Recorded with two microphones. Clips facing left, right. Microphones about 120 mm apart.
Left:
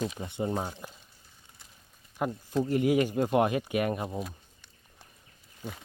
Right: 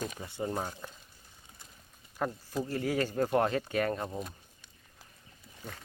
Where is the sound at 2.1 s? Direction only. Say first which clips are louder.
Left 4 dB; 15° left (ahead or behind).